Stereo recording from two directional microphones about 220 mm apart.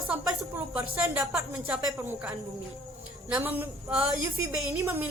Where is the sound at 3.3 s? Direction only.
5° right (ahead or behind).